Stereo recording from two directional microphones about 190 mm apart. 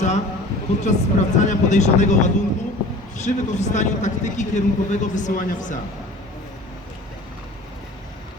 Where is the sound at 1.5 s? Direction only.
40° left (ahead or behind).